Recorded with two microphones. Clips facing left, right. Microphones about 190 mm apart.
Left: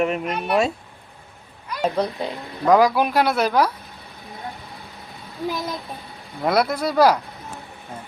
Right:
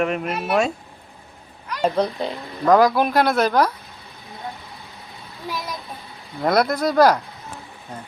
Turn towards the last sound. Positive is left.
turn(degrees=10)  # may be behind; listen again after turning